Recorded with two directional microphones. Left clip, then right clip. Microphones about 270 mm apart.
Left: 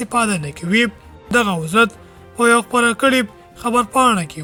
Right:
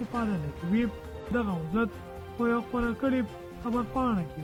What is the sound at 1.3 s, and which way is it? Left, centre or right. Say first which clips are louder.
Speech: left 15 dB; centre.